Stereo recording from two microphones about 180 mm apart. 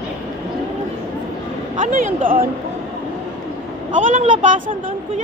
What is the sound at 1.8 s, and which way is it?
Speech, 45° right (ahead or behind).